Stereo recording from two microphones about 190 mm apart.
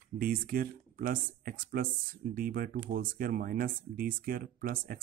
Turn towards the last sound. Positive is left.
turn(degrees=-50)  # may be behind; listen again after turning